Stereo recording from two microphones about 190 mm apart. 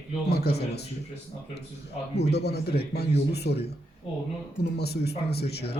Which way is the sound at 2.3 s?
60° left (ahead or behind).